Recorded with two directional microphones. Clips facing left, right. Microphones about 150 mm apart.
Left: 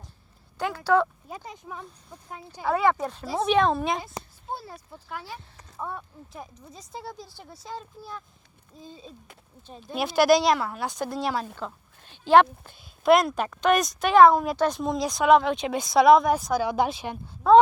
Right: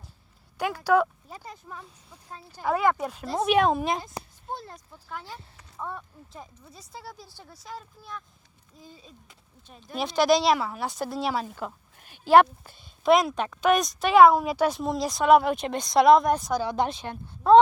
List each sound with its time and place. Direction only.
0.9 s a woman's voice: 15° right (ahead or behind)
1.3 s speech: 20° left (ahead or behind)
2.7 s a woman's voice: centre (ahead or behind)
4.0 s a woman's voice: 5° left (ahead or behind); by 7.1 s 20° left (ahead or behind)
7.1 s a woman's voice: 5° right (ahead or behind)
7.5 s speech: 25° left (ahead or behind)
9.8 s a woman's voice: 5° left (ahead or behind)